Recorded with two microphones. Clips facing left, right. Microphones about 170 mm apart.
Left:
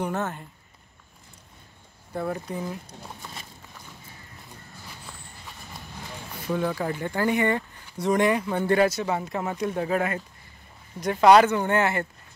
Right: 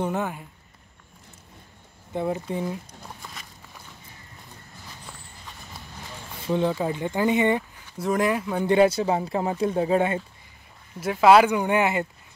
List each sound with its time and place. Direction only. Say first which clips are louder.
0.0 s speech: right 2 dB; 15° right (ahead or behind)
2.1 s speech: right 3 dB; 20° right (ahead or behind)
6.4 s speech: right 3 dB; 25° right (ahead or behind)
8.0 s speech: left 1 dB; centre (ahead or behind)
8.6 s speech: right 4 dB; 25° right (ahead or behind)
11.0 s speech: even; 5° right (ahead or behind)